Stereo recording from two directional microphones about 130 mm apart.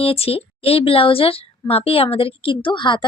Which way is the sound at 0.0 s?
45° left (ahead or behind).